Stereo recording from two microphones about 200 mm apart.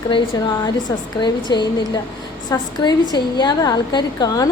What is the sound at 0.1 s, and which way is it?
A woman's voice, 20° left (ahead or behind).